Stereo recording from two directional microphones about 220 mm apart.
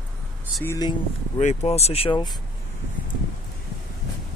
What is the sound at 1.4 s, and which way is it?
Speech, 30° left (ahead or behind).